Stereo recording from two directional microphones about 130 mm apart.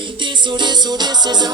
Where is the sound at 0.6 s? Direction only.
35° right (ahead or behind).